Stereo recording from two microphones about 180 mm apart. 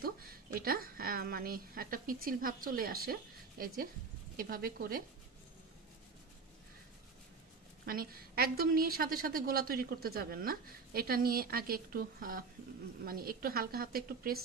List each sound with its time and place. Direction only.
0.0 s a woman's voice: 55° right (ahead or behind)
7.8 s a woman's voice: 55° right (ahead or behind)